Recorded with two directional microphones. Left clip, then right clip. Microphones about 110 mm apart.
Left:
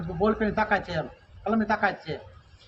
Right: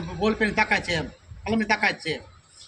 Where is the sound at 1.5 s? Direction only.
45° right (ahead or behind).